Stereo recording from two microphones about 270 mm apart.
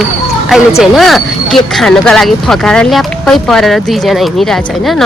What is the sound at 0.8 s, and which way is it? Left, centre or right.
Speech, centre.